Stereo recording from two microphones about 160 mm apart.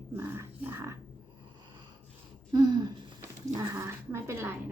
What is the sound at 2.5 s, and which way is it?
Speech, 25° right (ahead or behind).